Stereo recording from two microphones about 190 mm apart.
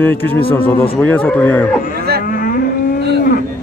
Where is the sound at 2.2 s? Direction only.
50° left (ahead or behind).